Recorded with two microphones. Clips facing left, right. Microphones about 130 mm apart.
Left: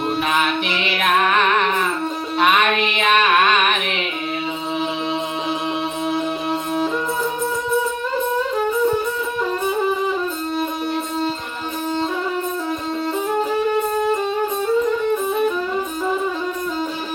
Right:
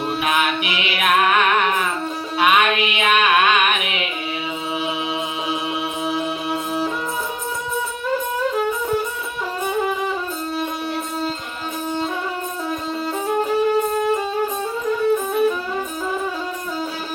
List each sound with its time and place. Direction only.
0.2 s music: 10° right (ahead or behind)